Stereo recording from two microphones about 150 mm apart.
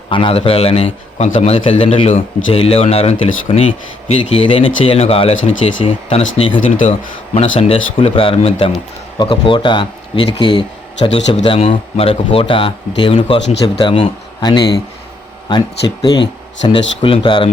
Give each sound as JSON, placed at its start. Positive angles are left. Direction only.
{"t": 0.1, "sound": "a man's voice", "side_deg": 35}
{"t": 6.6, "sound": "speech", "side_deg": 55}
{"t": 7.3, "sound": "a man's voice", "side_deg": 40}
{"t": 16.6, "sound": "a man's voice", "side_deg": 35}